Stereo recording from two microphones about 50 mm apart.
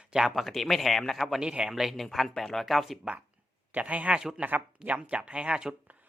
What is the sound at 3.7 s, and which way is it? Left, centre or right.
Speech, right.